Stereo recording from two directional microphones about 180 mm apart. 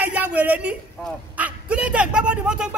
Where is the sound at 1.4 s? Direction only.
5° right (ahead or behind).